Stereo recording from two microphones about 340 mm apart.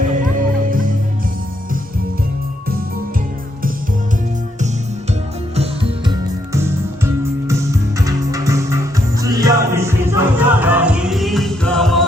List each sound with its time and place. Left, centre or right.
0.1 s music: right
5.5 s music: centre